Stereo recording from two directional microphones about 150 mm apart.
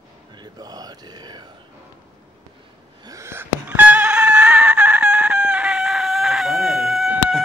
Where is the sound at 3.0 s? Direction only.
20° right (ahead or behind).